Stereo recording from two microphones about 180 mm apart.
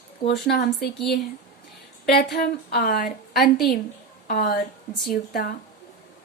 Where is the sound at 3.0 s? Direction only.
Centre (ahead or behind).